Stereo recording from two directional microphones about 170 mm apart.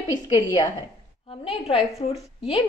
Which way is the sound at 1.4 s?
35° left (ahead or behind).